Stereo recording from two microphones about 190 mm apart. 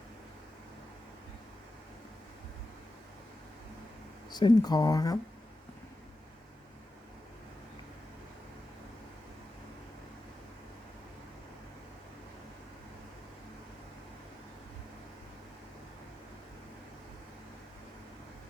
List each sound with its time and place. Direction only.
4.3 s speech: 20° left (ahead or behind)